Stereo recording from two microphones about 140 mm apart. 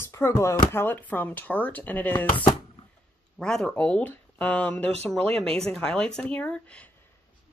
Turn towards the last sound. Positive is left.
turn(degrees=10)  # may be behind; listen again after turning